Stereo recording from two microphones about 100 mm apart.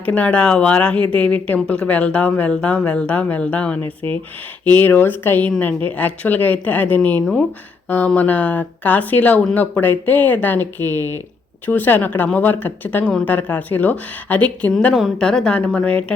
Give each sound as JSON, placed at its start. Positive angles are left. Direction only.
{"t": 0.0, "sound": "speech", "side_deg": 15}
{"t": 3.8, "sound": "speech", "side_deg": -65}
{"t": 4.6, "sound": "speech", "side_deg": 20}